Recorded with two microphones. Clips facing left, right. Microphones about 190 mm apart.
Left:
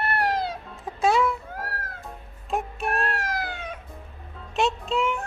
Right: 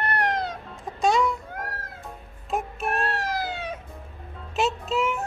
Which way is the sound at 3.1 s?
30° right (ahead or behind).